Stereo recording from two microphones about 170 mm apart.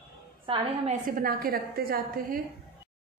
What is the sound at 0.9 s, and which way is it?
A woman's voice, 55° right (ahead or behind).